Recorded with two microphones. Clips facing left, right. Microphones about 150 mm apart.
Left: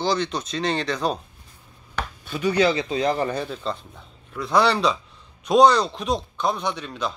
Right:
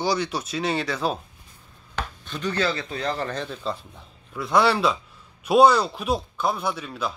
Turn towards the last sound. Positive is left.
turn(degrees=-5)  # may be behind; listen again after turning